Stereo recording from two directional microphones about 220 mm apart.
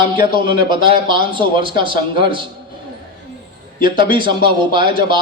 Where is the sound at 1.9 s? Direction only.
40° left (ahead or behind).